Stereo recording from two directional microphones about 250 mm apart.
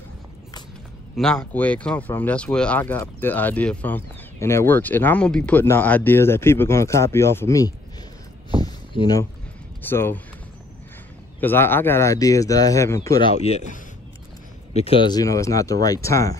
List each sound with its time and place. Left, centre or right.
1.1 s speech: centre
8.6 s a sound: centre
9.8 s speech: centre
11.4 s speech: centre
14.7 s speech: left